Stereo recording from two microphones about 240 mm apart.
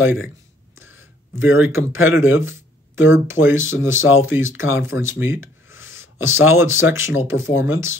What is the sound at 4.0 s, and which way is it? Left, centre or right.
Speech, left.